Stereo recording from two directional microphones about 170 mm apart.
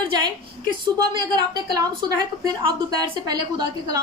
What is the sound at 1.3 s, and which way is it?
A woman's voice, 25° right (ahead or behind).